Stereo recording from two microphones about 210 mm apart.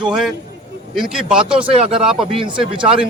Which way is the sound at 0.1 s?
Centre (ahead or behind).